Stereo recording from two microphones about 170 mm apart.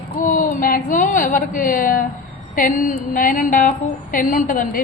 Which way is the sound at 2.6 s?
55° left (ahead or behind).